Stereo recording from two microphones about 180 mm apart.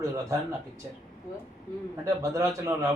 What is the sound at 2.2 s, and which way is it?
Speech, 15° right (ahead or behind).